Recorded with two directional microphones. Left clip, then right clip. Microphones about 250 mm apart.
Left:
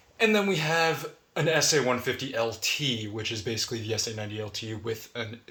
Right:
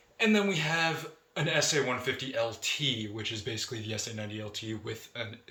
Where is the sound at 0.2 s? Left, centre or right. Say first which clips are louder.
Left 3 dB; left.